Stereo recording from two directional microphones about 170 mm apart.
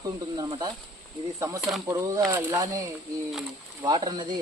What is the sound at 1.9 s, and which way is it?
Speech, 20° right (ahead or behind).